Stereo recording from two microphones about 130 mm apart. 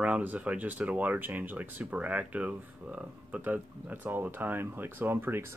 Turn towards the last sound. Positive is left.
turn(degrees=-20)  # may be behind; listen again after turning